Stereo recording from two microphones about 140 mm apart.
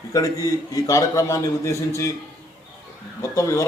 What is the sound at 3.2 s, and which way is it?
Speech, 20° left (ahead or behind).